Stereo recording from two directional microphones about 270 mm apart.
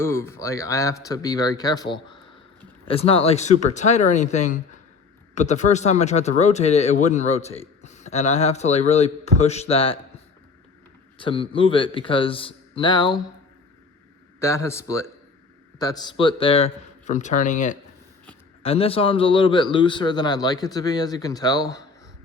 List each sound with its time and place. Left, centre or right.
0.0 s a man's voice: centre
11.2 s speech: centre
14.3 s a man's voice: centre